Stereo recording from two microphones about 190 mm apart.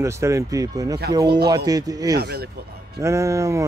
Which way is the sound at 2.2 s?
60° right (ahead or behind).